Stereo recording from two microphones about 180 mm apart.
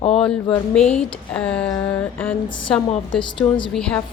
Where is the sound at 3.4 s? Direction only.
10° left (ahead or behind).